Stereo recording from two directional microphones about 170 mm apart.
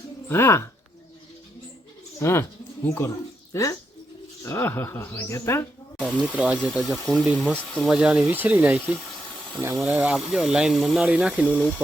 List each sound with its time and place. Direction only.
0.3 s speech: 15° left (ahead or behind)
2.1 s speech: 15° left (ahead or behind)
6.0 s speech: 5° left (ahead or behind)